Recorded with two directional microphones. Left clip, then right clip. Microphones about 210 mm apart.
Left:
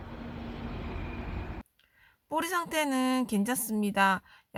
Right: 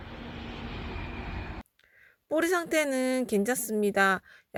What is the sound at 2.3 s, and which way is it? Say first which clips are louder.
A woman's voice: right 4 dB; 20° right (ahead or behind).